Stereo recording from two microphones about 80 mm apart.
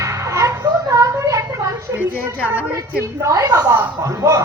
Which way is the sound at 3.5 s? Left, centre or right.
Right.